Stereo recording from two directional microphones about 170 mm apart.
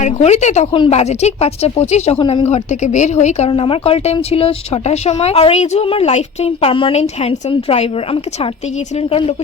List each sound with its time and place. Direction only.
0.0 s speech: 40° left (ahead or behind)